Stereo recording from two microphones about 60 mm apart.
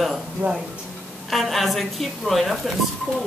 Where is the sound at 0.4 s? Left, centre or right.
Right.